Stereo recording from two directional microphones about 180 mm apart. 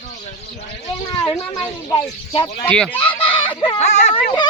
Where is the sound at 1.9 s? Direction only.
30° left (ahead or behind).